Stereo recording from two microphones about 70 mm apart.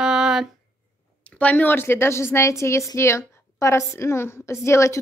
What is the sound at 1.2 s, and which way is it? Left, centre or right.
A woman's voice, left.